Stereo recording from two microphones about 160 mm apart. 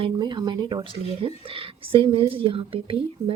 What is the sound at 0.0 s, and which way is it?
Speech, 30° right (ahead or behind).